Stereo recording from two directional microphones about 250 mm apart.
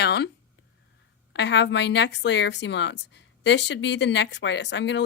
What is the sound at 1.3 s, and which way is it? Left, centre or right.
A woman's voice, left.